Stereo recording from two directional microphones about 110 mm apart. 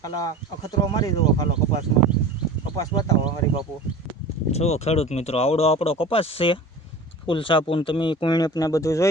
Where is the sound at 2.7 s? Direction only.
35° left (ahead or behind).